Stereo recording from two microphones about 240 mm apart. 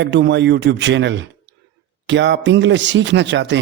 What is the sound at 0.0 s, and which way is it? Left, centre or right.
A man's voice, right.